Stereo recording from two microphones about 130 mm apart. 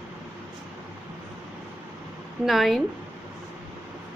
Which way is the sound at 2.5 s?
Centre (ahead or behind).